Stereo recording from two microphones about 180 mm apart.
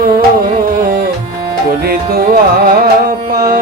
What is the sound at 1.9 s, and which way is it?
Music, 55° right (ahead or behind).